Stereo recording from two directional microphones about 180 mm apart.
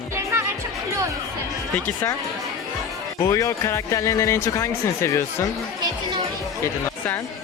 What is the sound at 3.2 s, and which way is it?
Speech, 20° left (ahead or behind).